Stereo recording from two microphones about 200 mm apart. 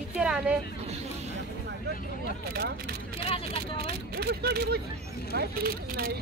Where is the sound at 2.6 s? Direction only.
55° right (ahead or behind).